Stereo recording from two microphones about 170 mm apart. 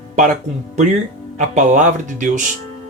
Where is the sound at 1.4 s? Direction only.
45° right (ahead or behind).